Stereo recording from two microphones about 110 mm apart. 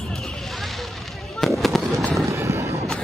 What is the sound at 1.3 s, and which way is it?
Fireworks, centre (ahead or behind).